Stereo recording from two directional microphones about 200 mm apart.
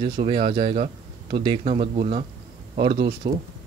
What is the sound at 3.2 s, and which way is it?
Speech, 20° right (ahead or behind).